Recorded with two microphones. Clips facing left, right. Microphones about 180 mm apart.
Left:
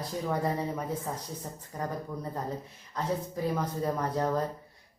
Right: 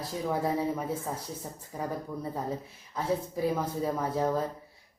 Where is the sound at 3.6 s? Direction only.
5° right (ahead or behind).